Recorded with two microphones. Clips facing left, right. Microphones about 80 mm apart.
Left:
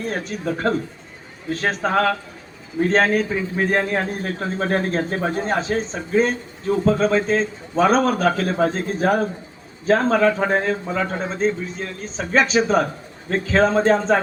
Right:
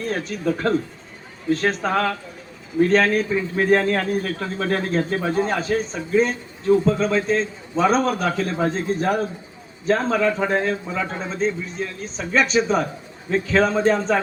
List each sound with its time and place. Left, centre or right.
0.0 s speech: left
3.5 s speech: centre
3.9 s a man's voice: left